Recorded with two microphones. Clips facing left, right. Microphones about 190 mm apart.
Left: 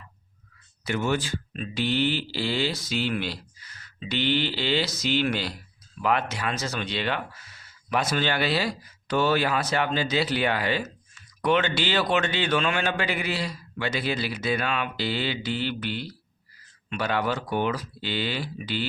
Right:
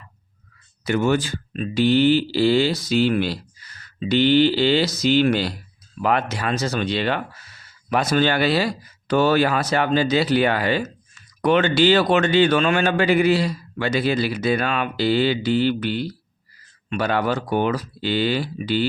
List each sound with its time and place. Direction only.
0.9 s speech: 45° right (ahead or behind)